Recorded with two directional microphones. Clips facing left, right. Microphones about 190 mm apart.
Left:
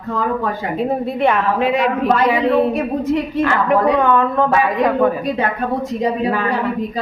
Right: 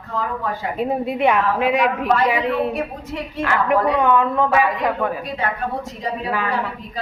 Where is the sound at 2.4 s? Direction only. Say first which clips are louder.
Left 6 dB; 35° left (ahead or behind).